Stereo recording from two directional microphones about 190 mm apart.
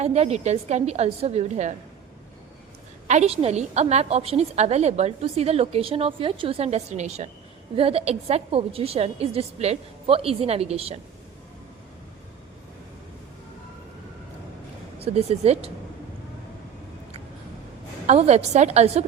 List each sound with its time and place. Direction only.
0.0 s a woman's voice: 35° right (ahead or behind)
3.1 s a woman's voice: 35° right (ahead or behind)
14.9 s speech: 30° right (ahead or behind)
18.0 s a woman's voice: 35° right (ahead or behind)